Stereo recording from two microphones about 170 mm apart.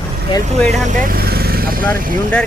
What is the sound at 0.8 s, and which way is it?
Speech, 50° right (ahead or behind).